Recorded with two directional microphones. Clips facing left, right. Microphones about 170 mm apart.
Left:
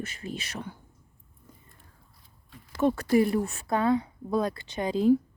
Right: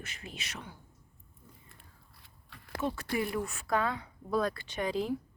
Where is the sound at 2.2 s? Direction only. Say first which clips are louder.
Left 5 dB; 75° right (ahead or behind).